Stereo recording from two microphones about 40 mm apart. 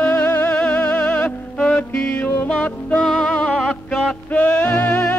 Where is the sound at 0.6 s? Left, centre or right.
Left.